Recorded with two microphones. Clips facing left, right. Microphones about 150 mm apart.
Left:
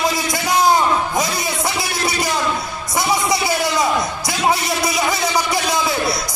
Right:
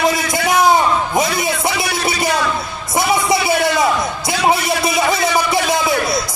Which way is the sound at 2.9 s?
25° right (ahead or behind).